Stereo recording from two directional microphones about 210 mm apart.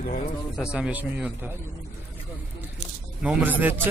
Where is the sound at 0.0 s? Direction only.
40° left (ahead or behind).